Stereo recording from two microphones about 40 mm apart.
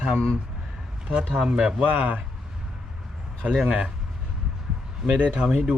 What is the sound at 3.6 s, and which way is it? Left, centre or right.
Speech, right.